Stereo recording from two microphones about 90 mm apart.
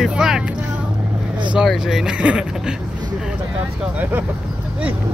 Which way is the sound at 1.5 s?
5° right (ahead or behind).